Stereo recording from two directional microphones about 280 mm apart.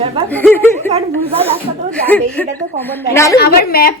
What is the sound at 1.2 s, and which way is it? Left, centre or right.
Speech, right.